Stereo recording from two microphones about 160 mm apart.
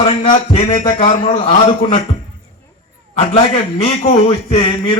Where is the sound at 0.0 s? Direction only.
40° left (ahead or behind).